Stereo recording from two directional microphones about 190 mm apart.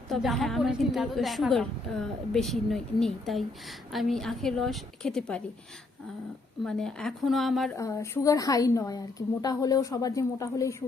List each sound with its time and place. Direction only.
0.1 s a woman's voice: centre (ahead or behind)
6.7 s a woman's voice: 5° left (ahead or behind)
7.8 s a woman's voice: 15° left (ahead or behind)